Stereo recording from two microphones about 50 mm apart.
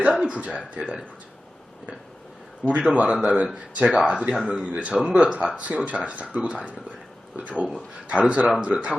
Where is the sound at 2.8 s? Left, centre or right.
Right.